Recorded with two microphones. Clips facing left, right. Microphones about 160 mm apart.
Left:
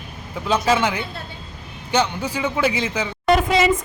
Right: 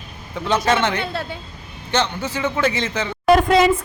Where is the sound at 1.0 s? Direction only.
90° right.